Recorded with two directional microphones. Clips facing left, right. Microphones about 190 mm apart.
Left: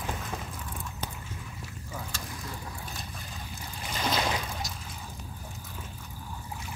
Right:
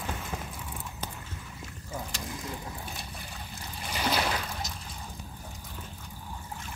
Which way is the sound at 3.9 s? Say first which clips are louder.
Right 1 dB; 10° right (ahead or behind).